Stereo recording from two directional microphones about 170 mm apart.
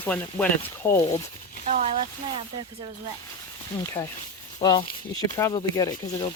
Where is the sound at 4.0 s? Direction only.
20° left (ahead or behind).